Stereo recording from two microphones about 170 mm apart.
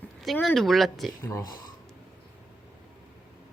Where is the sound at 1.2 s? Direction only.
20° left (ahead or behind).